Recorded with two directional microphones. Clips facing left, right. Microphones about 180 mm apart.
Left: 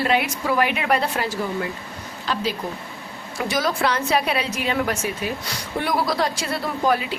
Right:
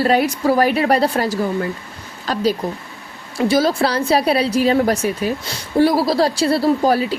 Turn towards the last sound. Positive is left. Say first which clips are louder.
# right 6 dB
turn(degrees=-35)  # may be behind; listen again after turning